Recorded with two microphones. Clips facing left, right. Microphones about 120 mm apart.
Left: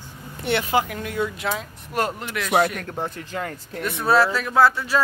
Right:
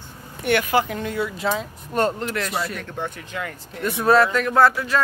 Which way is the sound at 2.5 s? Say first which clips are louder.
Left 7 dB; 65° left (ahead or behind).